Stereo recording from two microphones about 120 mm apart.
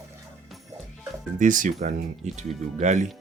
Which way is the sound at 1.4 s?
90° right.